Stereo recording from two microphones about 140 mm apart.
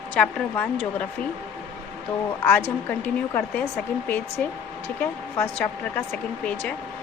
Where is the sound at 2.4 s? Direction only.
15° left (ahead or behind).